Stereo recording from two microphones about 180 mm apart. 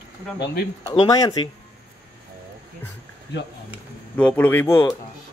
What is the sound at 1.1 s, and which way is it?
Speech, 20° left (ahead or behind).